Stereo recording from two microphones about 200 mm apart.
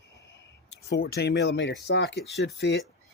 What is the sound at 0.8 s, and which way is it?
Speech, 50° left (ahead or behind).